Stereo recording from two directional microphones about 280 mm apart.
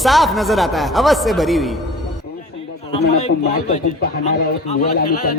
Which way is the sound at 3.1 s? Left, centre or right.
Left.